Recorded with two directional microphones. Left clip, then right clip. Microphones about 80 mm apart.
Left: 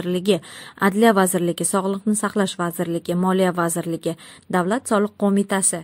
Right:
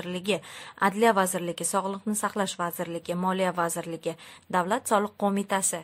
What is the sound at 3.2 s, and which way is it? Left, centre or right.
A woman's voice, left.